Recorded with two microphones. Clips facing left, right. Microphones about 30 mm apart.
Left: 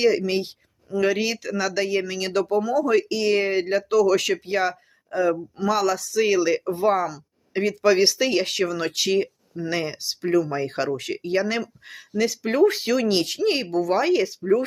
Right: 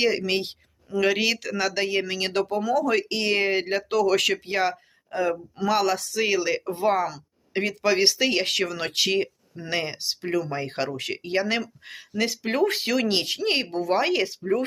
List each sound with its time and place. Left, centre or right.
0.0 s speech: right
1.7 s speech: right
4.4 s speech: right
6.1 s speech: right
8.0 s speech: right
8.4 s speech: right
9.1 s speech: right
10.9 s speech: right
12.5 s speech: right
13.1 s speech: right
14.1 s speech: right